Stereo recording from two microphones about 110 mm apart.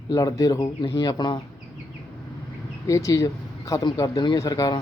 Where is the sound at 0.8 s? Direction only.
45° left (ahead or behind).